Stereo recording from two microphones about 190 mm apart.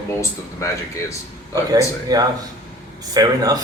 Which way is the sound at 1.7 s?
20° right (ahead or behind).